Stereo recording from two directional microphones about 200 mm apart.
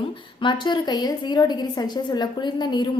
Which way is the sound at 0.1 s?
25° left (ahead or behind).